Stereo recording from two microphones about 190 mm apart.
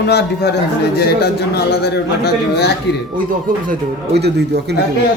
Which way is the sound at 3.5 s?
45° right (ahead or behind).